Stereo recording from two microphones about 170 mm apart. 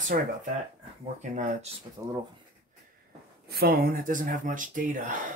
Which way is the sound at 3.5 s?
60° right (ahead or behind).